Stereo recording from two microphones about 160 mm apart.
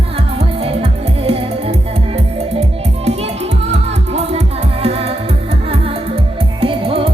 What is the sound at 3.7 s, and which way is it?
Music, 40° right (ahead or behind).